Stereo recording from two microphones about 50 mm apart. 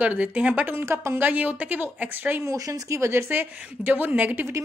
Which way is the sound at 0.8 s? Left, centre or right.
Right.